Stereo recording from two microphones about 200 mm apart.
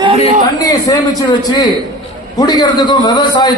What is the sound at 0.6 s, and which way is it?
A man's voice, 15° left (ahead or behind).